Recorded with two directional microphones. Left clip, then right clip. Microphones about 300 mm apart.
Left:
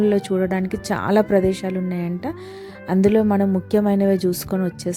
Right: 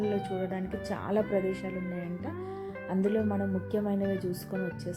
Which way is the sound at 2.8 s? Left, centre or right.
Left.